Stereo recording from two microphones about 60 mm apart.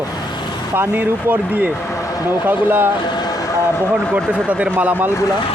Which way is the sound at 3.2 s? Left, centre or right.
Left.